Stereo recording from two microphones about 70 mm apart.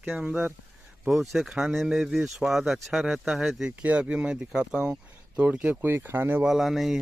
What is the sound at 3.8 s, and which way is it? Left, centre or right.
Speech, centre.